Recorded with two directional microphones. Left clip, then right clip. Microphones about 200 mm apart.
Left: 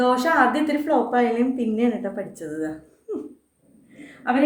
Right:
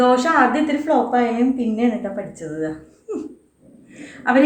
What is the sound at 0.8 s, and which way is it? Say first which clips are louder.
A woman's voice: right 2 dB; 35° left (ahead or behind).